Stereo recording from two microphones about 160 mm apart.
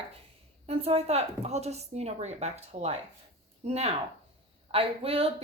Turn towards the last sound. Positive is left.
turn(degrees=-35)  # may be behind; listen again after turning